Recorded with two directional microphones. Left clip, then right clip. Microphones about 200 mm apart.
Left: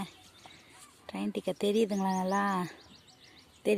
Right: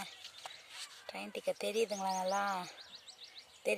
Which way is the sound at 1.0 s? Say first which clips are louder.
Left 7 dB; centre (ahead or behind).